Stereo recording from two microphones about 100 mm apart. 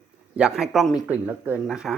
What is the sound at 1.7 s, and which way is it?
Speech, 5° right (ahead or behind).